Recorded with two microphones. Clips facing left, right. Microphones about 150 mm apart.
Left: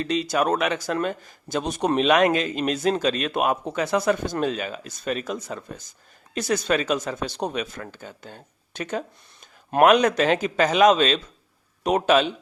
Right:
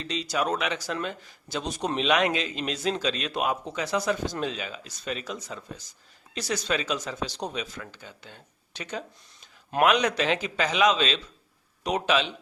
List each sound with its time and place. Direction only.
0.0 s speech: 55° left (ahead or behind)